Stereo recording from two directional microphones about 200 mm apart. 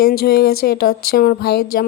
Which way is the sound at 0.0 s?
50° left (ahead or behind).